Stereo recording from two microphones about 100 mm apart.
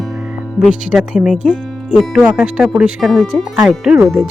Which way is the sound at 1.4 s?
10° left (ahead or behind).